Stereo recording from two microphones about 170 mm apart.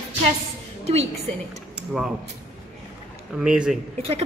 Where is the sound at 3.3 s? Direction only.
5° right (ahead or behind).